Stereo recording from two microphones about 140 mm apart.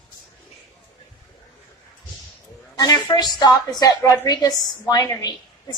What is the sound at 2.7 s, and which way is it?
A woman's voice, 30° left (ahead or behind).